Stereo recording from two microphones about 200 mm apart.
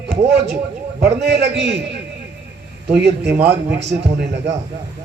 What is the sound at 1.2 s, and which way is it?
Speech, 60° right (ahead or behind).